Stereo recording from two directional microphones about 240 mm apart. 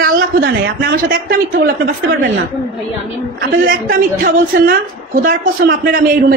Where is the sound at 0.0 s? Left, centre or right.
Right.